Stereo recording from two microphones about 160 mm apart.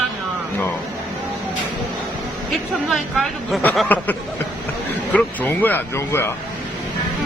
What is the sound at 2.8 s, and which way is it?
Speech, centre (ahead or behind).